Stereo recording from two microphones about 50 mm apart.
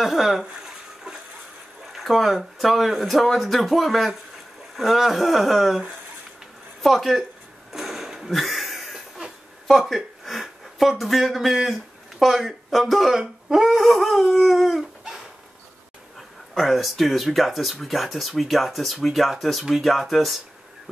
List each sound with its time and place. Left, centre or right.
0.0 s a sound: centre
1.9 s speech: centre
7.7 s a sound: centre
12.8 s speech: centre
13.7 s dog: centre
16.2 s speech: centre